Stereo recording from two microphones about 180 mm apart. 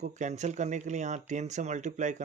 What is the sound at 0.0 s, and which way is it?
Speech, 40° right (ahead or behind).